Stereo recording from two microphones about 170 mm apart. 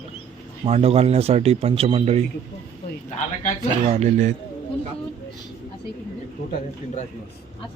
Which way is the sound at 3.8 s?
40° right (ahead or behind).